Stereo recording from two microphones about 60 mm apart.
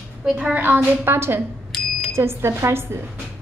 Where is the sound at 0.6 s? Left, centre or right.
Right.